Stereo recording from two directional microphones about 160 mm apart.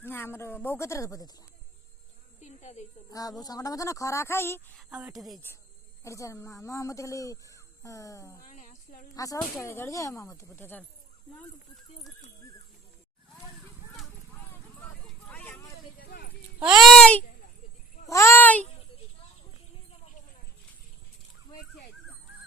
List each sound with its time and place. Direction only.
0.0 s speech: 15° left (ahead or behind)
2.4 s a sound: 45° left (ahead or behind)
3.1 s speech: 20° left (ahead or behind)
4.7 s a woman's voice: centre (ahead or behind)
6.0 s speech: 20° left (ahead or behind)
8.4 s a sound: 50° left (ahead or behind)
9.1 s speech: 20° left (ahead or behind)
15.0 s vehicle: 10° left (ahead or behind)
16.0 s clip-clop: 80° left
16.6 s a woman's voice: 5° right (ahead or behind)
18.1 s speech: 15° left (ahead or behind)